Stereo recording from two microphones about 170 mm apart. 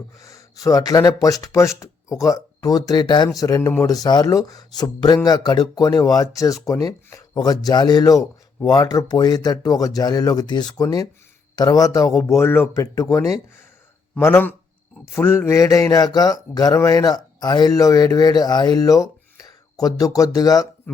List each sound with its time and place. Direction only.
0.2 s speech: 20° left (ahead or behind)